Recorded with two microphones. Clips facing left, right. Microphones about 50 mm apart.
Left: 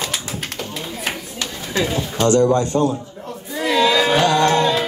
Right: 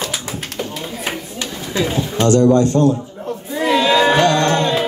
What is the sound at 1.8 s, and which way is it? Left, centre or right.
Speech, right.